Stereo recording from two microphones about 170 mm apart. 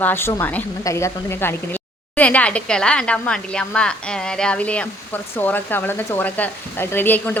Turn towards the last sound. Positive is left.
turn(degrees=10)  # may be behind; listen again after turning